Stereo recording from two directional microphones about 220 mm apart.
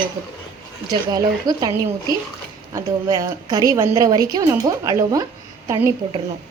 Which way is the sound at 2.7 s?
15° right (ahead or behind).